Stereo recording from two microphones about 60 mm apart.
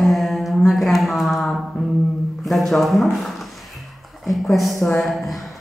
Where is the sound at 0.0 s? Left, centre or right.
Centre.